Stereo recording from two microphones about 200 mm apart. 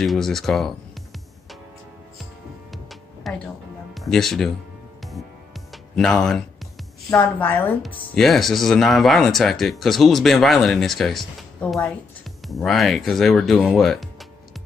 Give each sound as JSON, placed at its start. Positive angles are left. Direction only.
{"t": 0.0, "sound": "speech", "side_deg": 0}
{"t": 2.7, "sound": "music", "side_deg": 0}
{"t": 3.9, "sound": "speech", "side_deg": 0}
{"t": 5.0, "sound": "music", "side_deg": 0}
{"t": 7.1, "sound": "a woman's voice", "side_deg": 10}